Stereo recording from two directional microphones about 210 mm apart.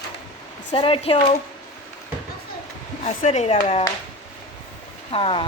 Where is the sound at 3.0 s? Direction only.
30° left (ahead or behind).